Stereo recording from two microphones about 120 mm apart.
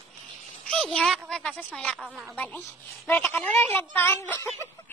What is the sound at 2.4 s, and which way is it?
A child's voice, 15° left (ahead or behind).